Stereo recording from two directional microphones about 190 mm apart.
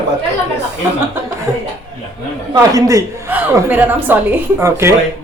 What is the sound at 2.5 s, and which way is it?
A man's voice, 20° right (ahead or behind).